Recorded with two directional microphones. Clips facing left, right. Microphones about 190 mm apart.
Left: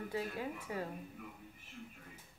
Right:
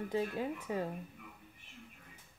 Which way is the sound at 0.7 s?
25° right (ahead or behind).